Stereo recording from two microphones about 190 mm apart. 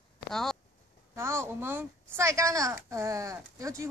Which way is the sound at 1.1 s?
15° right (ahead or behind).